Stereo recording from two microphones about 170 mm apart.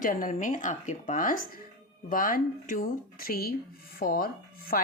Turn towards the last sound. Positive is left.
turn(degrees=60)  # may be behind; listen again after turning